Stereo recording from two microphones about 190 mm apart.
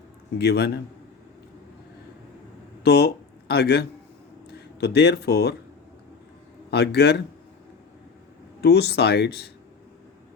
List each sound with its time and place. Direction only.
0.3 s speech: 60° left (ahead or behind)
2.8 s speech: 60° left (ahead or behind)
6.7 s speech: 60° left (ahead or behind)
8.6 s speech: 60° left (ahead or behind)